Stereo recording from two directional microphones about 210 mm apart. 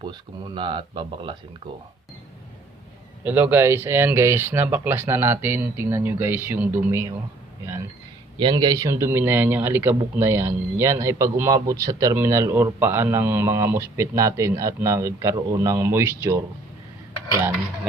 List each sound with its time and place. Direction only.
0.0 s speech: 20° right (ahead or behind)
3.2 s a man's voice: 10° right (ahead or behind)
8.4 s a man's voice: 20° right (ahead or behind)